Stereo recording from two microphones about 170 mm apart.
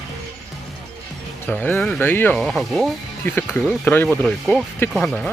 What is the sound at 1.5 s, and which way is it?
Speech, 10° left (ahead or behind).